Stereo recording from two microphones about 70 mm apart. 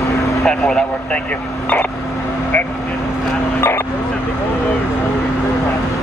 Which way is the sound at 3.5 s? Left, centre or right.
Left.